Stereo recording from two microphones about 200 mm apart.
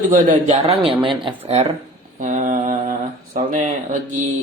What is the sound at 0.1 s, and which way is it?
Speech, 40° right (ahead or behind).